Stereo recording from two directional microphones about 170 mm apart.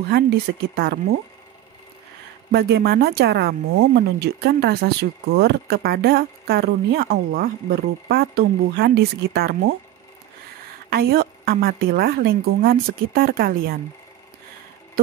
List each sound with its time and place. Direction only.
0.1 s speech: 70° right (ahead or behind)
2.5 s speech: 70° right (ahead or behind)
10.9 s a woman's voice: 65° right (ahead or behind)